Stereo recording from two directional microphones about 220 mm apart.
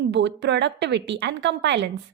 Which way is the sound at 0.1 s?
55° right (ahead or behind).